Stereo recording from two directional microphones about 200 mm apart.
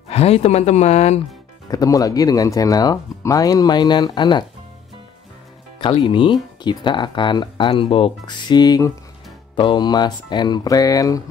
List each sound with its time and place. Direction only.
0.1 s speech: 30° left (ahead or behind)
1.7 s speech: 20° left (ahead or behind)
5.8 s speech: 25° left (ahead or behind)